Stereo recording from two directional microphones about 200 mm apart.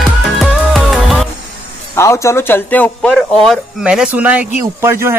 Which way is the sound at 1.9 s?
15° left (ahead or behind).